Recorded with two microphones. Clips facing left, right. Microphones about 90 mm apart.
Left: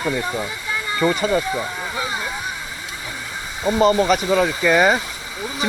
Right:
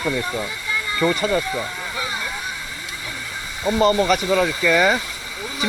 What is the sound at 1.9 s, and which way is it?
Vehicle, 30° left (ahead or behind).